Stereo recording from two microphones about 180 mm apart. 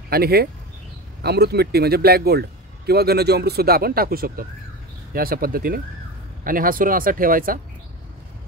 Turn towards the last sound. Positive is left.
turn(degrees=-50)  # may be behind; listen again after turning